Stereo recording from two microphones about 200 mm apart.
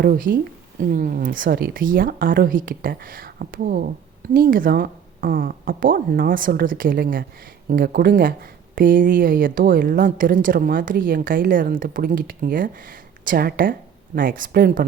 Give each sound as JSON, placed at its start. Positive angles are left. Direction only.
{"t": 0.0, "sound": "speech", "side_deg": -45}